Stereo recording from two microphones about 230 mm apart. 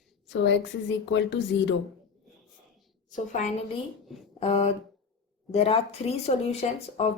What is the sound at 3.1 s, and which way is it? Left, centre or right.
Speech, left.